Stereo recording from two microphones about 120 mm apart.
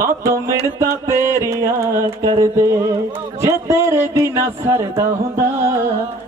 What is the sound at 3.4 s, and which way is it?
Speech, 25° right (ahead or behind).